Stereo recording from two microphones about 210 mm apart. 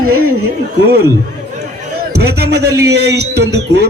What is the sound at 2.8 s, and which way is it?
Speech, 50° right (ahead or behind).